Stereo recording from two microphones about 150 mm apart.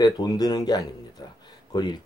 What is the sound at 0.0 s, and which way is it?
Speech, 25° left (ahead or behind).